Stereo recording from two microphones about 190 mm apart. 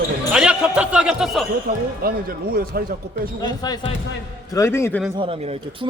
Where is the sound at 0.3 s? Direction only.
5° right (ahead or behind).